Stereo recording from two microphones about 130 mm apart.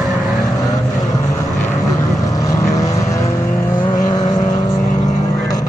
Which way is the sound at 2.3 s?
25° left (ahead or behind).